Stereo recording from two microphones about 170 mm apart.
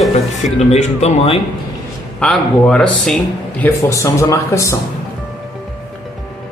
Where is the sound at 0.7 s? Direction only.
40° left (ahead or behind).